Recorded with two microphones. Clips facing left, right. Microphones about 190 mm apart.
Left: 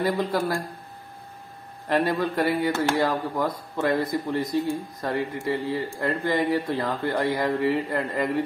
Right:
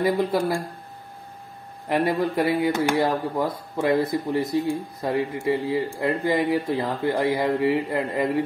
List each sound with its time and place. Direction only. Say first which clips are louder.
0.0 s speech: right 3 dB; 20° right (ahead or behind)
1.9 s speech: right 1 dB; 15° right (ahead or behind)